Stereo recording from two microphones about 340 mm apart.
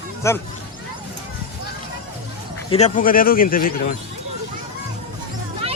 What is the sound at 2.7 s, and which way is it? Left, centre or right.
Speech, centre.